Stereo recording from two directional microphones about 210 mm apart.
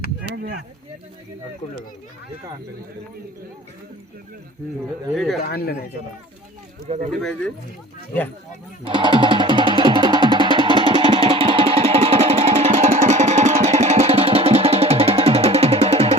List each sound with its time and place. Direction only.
5.1 s speech: centre (ahead or behind)
5.4 s speech: 45° left (ahead or behind)
6.8 s speech: 30° right (ahead or behind)
7.2 s speech: 5° left (ahead or behind)
8.8 s music: 25° right (ahead or behind)